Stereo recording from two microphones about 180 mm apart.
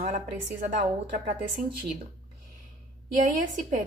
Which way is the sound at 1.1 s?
50° right (ahead or behind).